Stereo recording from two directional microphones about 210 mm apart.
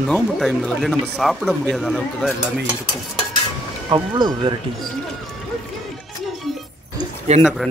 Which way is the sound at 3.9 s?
25° right (ahead or behind).